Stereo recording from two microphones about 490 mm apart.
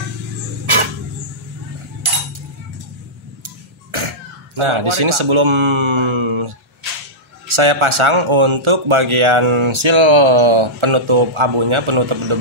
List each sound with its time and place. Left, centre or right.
0.7 s a sound: right
3.4 s clock: right
4.6 s speech: right